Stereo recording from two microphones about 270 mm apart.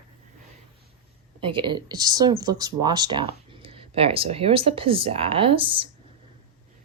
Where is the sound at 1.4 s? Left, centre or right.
Centre.